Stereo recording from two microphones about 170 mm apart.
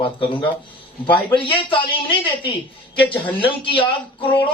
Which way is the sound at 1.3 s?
30° left (ahead or behind).